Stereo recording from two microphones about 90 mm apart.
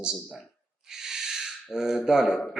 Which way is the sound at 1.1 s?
5° right (ahead or behind).